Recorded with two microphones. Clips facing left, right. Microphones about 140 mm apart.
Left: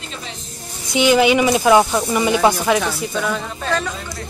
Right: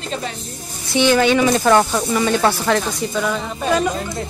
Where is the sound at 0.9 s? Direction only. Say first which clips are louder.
Left 1 dB; 15° left (ahead or behind).